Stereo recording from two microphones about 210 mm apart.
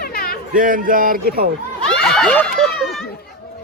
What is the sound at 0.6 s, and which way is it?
Speech, 40° right (ahead or behind).